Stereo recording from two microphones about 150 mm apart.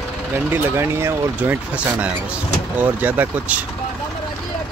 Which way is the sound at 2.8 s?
10° right (ahead or behind).